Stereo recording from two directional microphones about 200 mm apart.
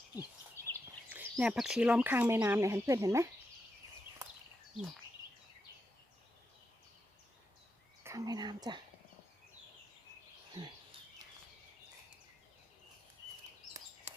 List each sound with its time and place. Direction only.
0.2 s a sound: 10° left (ahead or behind)
1.1 s speech: 5° right (ahead or behind)
8.0 s speech: 15° right (ahead or behind)